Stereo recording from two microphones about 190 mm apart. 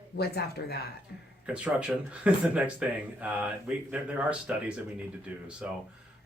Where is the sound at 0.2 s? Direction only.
55° left (ahead or behind).